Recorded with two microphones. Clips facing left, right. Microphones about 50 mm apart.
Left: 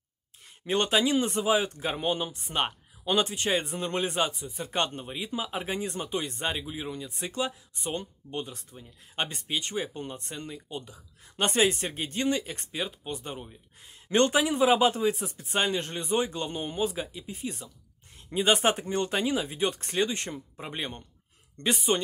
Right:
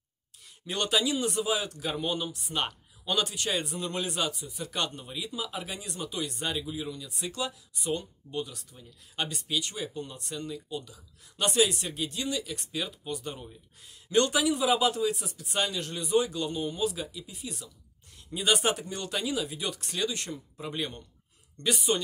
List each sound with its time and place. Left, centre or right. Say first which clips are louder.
0.7 s speech: left 3 dB; left
14.0 s speech: left 1 dB; left